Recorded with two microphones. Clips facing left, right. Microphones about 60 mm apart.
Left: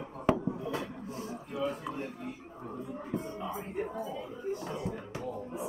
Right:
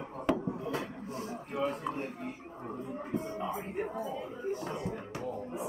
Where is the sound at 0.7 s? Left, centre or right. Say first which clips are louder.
Even; right.